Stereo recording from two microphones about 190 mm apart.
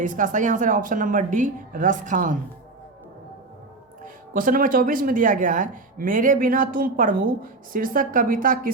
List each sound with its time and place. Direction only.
0.0 s speech: 40° right (ahead or behind)
4.0 s speech: 45° right (ahead or behind)